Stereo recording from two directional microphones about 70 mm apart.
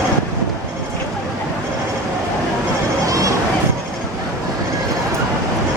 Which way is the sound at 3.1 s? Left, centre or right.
Right.